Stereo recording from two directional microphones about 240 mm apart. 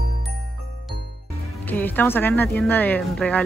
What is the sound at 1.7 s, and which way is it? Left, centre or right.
Speech, centre.